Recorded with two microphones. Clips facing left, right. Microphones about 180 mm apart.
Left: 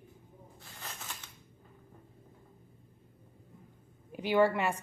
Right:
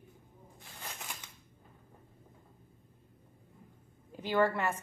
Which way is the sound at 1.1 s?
15° right (ahead or behind).